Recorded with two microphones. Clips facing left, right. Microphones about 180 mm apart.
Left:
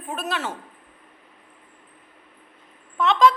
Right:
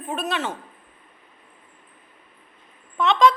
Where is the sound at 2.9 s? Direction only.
5° left (ahead or behind).